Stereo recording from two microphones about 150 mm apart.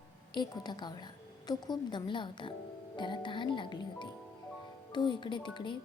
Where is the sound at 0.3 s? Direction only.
30° left (ahead or behind).